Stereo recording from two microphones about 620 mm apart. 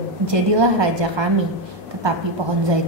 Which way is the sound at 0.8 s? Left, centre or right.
Right.